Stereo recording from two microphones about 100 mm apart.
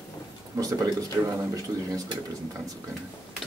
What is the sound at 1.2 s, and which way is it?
Speech, 20° right (ahead or behind).